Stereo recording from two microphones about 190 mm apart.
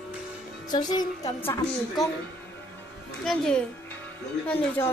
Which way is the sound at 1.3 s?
5° left (ahead or behind).